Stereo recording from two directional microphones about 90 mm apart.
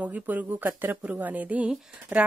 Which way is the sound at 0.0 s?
20° right (ahead or behind).